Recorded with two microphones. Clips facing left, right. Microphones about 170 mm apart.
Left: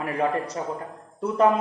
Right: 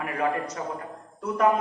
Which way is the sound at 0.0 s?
30° left (ahead or behind).